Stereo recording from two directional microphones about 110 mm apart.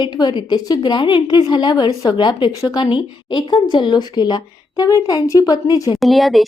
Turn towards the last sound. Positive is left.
turn(degrees=0)  # may be behind; listen again after turning